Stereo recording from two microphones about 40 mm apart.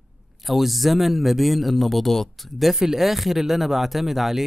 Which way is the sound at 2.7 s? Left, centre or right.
Centre.